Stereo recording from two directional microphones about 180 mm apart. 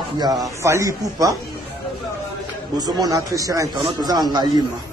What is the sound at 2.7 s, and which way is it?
Speech, 20° right (ahead or behind).